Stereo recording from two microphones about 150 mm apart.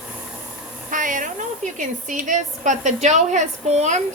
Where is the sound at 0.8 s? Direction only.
60° right (ahead or behind).